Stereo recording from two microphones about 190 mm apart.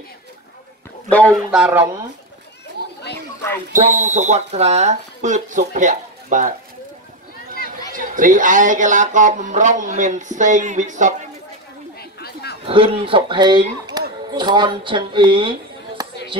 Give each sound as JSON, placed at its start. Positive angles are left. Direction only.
{"t": 1.1, "sound": "speech", "side_deg": 5}
{"t": 2.8, "sound": "chatter", "side_deg": -55}
{"t": 3.7, "sound": "speech", "side_deg": -40}
{"t": 7.9, "sound": "speech", "side_deg": -45}
{"t": 12.0, "sound": "chatter", "side_deg": 55}
{"t": 12.6, "sound": "speech", "side_deg": -30}
{"t": 16.0, "sound": "a sound", "side_deg": -20}